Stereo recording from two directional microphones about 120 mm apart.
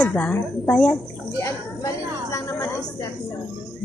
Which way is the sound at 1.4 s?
25° left (ahead or behind).